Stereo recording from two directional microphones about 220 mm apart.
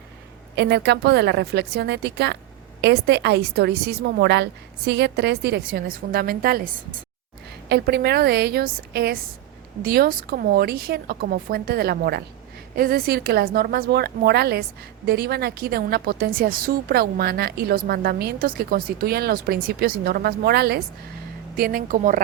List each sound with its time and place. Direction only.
0.5 s a woman's voice: 50° right (ahead or behind)
7.7 s a woman's voice: 50° right (ahead or behind)